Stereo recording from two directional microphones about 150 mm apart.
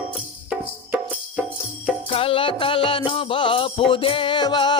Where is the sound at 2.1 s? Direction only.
40° left (ahead or behind).